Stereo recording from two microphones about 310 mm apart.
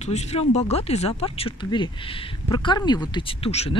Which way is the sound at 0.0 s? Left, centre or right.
Left.